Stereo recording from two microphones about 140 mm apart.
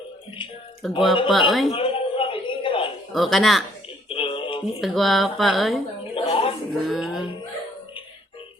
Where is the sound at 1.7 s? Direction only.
40° left (ahead or behind).